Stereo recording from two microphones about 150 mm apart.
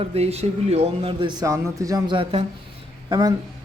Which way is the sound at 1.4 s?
20° right (ahead or behind).